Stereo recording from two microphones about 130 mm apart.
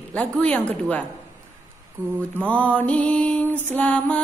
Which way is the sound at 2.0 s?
15° right (ahead or behind).